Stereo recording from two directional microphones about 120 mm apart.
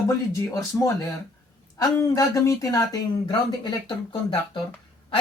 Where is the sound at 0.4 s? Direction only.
25° left (ahead or behind).